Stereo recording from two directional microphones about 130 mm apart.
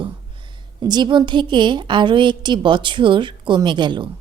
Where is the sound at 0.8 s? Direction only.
35° right (ahead or behind).